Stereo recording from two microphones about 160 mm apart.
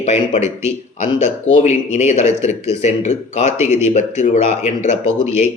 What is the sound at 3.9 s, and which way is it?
Speech, 45° left (ahead or behind).